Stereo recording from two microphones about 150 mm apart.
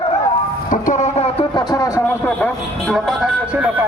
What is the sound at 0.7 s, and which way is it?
Vehicle, 60° left (ahead or behind).